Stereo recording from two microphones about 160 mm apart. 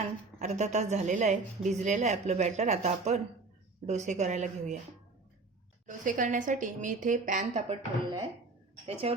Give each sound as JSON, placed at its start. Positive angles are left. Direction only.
{"t": 0.3, "sound": "a woman's voice", "side_deg": -45}
{"t": 5.8, "sound": "a woman's voice", "side_deg": -50}
{"t": 8.9, "sound": "a woman's voice", "side_deg": -40}